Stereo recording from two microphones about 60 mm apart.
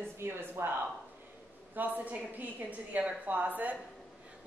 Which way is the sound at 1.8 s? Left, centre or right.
Right.